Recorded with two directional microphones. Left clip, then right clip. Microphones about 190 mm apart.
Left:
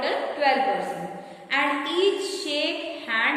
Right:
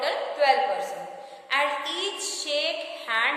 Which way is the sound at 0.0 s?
35° right (ahead or behind).